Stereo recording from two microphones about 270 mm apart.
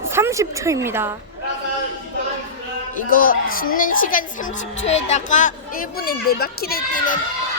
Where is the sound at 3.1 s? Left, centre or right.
Left.